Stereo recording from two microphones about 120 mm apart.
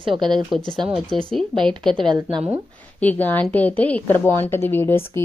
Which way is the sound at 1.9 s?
45° right (ahead or behind).